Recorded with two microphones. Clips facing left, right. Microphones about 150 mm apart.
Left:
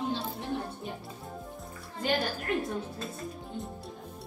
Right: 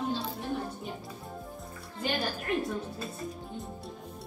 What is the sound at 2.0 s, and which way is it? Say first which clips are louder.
A woman's voice: left 2 dB; centre (ahead or behind).